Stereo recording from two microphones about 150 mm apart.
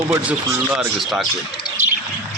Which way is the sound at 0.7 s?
Centre (ahead or behind).